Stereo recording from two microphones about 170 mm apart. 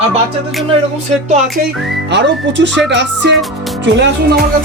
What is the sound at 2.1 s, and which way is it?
Speech, 90° right.